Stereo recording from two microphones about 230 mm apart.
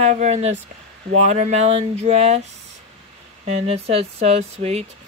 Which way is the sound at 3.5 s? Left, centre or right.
Right.